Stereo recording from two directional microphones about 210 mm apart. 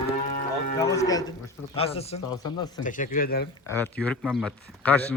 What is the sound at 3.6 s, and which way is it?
Speech, 10° left (ahead or behind).